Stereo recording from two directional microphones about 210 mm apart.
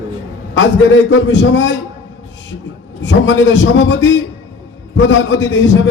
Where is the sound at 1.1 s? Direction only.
60° left (ahead or behind).